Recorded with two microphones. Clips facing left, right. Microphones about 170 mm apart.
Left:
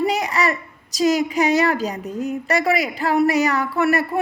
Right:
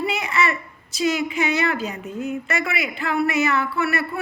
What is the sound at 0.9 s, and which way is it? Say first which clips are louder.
Speech: left 4 dB; 40° left (ahead or behind).